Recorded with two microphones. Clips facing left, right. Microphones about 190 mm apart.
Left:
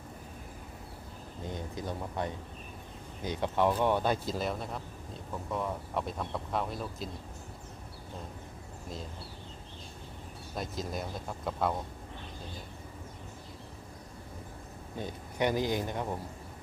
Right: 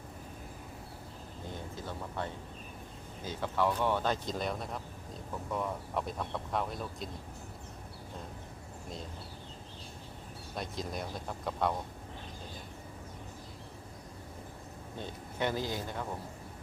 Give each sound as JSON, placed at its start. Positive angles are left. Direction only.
{"t": 1.5, "sound": "speech", "side_deg": 15}
{"t": 10.5, "sound": "speech", "side_deg": 0}
{"t": 14.9, "sound": "speech", "side_deg": 15}